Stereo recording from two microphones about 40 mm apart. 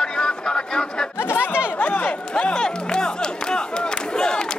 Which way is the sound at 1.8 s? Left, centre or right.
Left.